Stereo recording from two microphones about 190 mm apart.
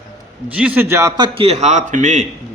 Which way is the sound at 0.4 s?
10° right (ahead or behind).